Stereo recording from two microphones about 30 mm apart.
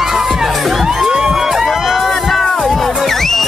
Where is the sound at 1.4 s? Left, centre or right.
Centre.